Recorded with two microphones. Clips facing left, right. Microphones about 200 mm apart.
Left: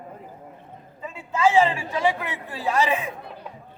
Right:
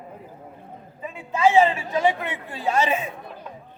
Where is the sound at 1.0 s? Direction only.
20° right (ahead or behind).